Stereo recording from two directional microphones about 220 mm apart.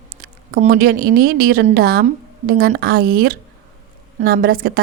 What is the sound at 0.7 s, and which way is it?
A woman's voice, 45° right (ahead or behind).